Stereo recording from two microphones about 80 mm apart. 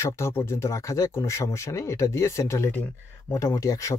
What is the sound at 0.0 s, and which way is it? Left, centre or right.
Speech, left.